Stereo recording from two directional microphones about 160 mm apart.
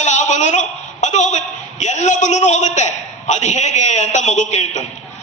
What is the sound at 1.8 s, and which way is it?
A man's voice, 50° left (ahead or behind).